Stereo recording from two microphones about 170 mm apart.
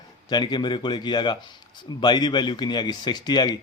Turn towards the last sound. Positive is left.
turn(degrees=25)  # may be behind; listen again after turning